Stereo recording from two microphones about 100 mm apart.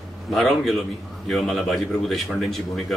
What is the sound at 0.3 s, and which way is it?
Speech, 5° left (ahead or behind).